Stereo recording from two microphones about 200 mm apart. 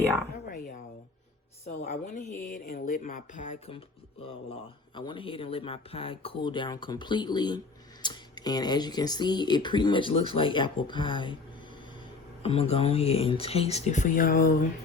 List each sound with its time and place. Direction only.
0.3 s a sound: 45° left (ahead or behind)
1.6 s speech: 40° left (ahead or behind)
4.9 s speech: 25° left (ahead or behind)
12.4 s speech: 30° left (ahead or behind)